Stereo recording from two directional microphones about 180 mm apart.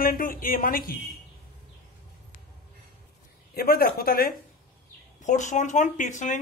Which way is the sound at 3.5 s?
60° left (ahead or behind).